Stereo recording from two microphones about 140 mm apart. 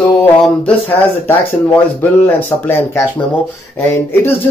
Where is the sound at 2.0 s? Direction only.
15° left (ahead or behind).